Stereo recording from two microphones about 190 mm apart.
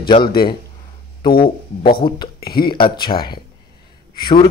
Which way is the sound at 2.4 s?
55° left (ahead or behind).